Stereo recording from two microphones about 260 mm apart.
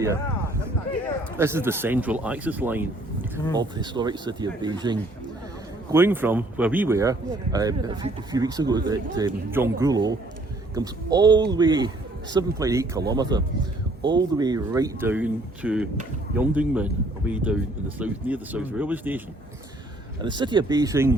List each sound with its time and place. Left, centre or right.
1.4 s speech: centre
20.2 s speech: centre